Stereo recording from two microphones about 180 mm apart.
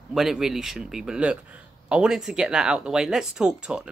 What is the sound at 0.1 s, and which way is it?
Speech, centre (ahead or behind).